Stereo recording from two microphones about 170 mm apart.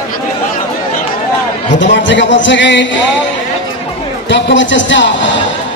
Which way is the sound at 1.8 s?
90° left.